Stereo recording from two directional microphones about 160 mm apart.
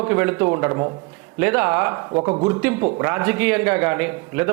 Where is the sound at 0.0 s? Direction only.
15° right (ahead or behind).